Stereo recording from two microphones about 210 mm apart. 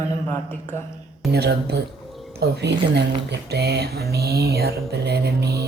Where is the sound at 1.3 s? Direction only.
50° right (ahead or behind).